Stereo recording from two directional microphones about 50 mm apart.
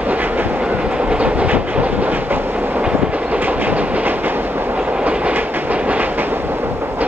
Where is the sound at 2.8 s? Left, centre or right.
Right.